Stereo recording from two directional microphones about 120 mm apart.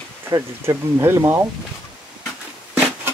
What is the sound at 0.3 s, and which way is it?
Speech, 25° right (ahead or behind).